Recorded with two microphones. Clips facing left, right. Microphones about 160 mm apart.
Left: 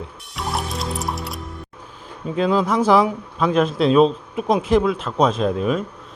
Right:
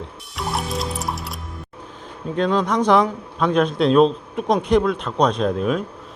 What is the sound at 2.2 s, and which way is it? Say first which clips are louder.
Speech: left 1 dB; 5° left (ahead or behind).